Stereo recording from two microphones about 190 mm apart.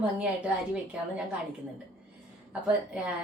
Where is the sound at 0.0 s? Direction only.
5° right (ahead or behind).